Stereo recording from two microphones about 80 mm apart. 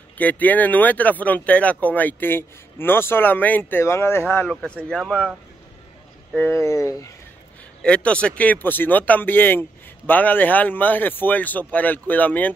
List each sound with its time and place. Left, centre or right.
0.2 s speech: left
3.8 s speech: left
4.8 s speech: centre
6.5 s speech: left
7.8 s speech: centre